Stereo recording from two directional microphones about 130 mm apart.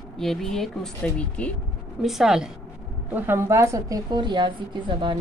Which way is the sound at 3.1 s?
15° right (ahead or behind).